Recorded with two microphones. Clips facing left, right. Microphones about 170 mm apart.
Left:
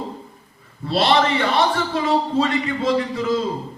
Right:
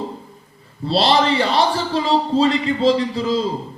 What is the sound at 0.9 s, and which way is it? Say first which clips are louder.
A man's voice: right 1 dB; 30° right (ahead or behind).